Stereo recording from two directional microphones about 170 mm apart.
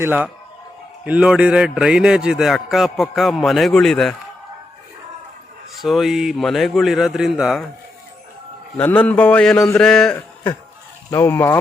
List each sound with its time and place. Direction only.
0.0 s a man's voice: 10° right (ahead or behind)
5.8 s a man's voice: centre (ahead or behind)
8.8 s a man's voice: 10° left (ahead or behind)
11.1 s a man's voice: 15° left (ahead or behind)